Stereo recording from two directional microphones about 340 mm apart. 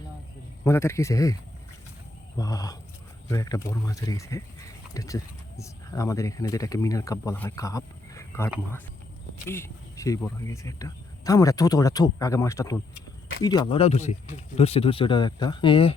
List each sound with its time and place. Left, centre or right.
0.6 s speech: centre
8.4 s speech: centre
9.5 s speech: centre